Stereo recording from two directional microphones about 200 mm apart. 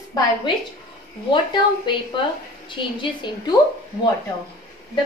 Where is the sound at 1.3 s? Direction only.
25° left (ahead or behind).